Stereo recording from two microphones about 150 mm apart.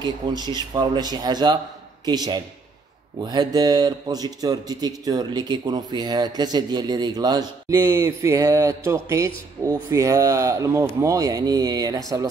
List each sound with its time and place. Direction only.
0.0 s speech: 30° right (ahead or behind)